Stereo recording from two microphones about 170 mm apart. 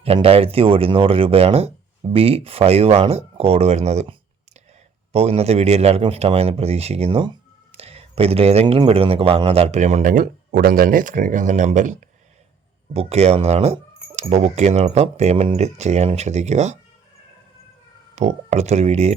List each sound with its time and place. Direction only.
0.0 s speech: 35° right (ahead or behind)
5.1 s speech: 35° right (ahead or behind)
18.1 s speech: 40° right (ahead or behind)